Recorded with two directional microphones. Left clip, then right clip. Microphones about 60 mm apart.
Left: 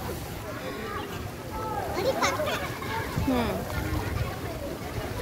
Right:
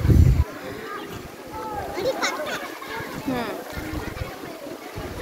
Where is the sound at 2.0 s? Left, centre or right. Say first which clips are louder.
Right 1 dB; right.